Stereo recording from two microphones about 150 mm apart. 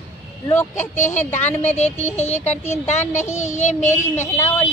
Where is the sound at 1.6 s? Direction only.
50° left (ahead or behind).